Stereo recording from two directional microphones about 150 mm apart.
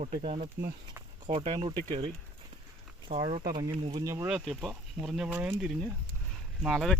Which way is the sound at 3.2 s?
35° right (ahead or behind).